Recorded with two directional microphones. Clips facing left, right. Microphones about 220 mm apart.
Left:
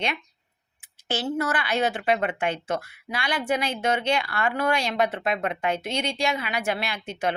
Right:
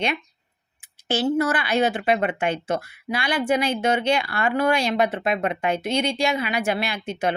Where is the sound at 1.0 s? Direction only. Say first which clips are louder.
Right 5 dB; 10° right (ahead or behind).